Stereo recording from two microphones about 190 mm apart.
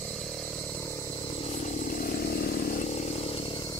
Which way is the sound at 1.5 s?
40° left (ahead or behind).